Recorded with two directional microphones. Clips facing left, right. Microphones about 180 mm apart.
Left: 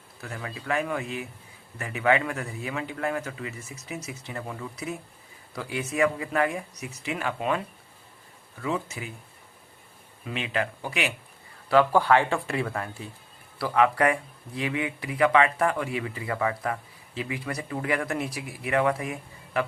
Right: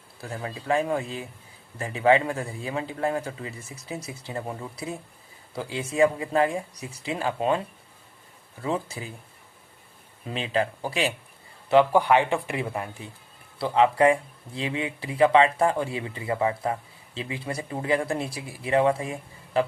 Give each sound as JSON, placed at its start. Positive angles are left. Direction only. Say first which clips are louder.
{"t": 0.2, "sound": "speech", "louder": "right 3 dB", "side_deg": -30}
{"t": 8.6, "sound": "speech", "louder": "right 1 dB", "side_deg": -30}
{"t": 10.2, "sound": "speech", "louder": "right 3 dB", "side_deg": -30}
{"t": 11.7, "sound": "speech", "louder": "right 1 dB", "side_deg": -20}